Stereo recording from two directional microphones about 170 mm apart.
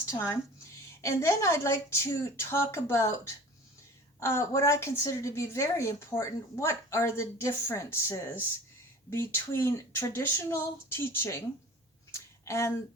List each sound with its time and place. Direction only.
0.0 s a woman's voice: 15° left (ahead or behind)
4.2 s a woman's voice: 15° left (ahead or behind)
12.1 s a sound: 15° left (ahead or behind)